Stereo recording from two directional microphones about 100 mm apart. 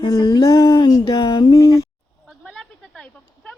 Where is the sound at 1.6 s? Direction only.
30° left (ahead or behind).